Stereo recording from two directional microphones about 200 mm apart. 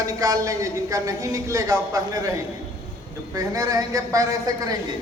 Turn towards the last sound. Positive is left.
turn(degrees=-15)  # may be behind; listen again after turning